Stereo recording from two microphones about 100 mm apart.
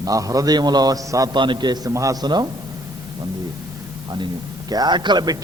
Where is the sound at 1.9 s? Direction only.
35° right (ahead or behind).